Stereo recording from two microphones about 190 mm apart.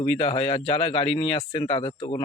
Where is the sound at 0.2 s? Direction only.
25° left (ahead or behind).